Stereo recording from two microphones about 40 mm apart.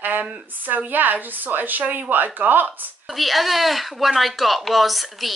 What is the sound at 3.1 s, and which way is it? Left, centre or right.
A woman's voice, centre.